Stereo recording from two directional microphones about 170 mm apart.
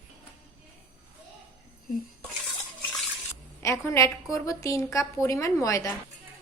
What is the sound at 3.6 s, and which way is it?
A woman's voice, 15° left (ahead or behind).